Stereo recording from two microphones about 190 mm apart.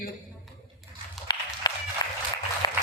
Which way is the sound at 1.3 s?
25° left (ahead or behind).